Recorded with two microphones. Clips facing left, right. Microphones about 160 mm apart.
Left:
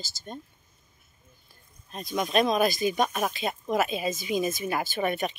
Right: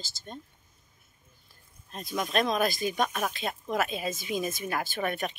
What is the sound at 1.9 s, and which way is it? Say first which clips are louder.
Speech: left 3 dB; 5° left (ahead or behind).